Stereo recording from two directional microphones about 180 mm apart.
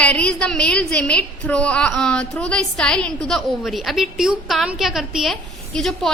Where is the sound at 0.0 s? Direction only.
5° left (ahead or behind).